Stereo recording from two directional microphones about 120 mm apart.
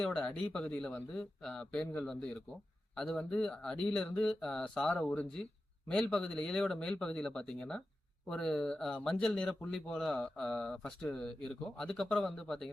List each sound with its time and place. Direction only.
0.0 s speech: 5° left (ahead or behind)